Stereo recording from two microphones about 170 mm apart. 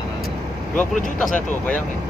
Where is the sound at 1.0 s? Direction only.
50° left (ahead or behind).